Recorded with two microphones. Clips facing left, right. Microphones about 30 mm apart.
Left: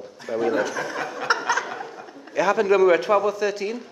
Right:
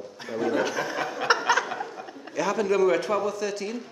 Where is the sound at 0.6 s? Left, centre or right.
Centre.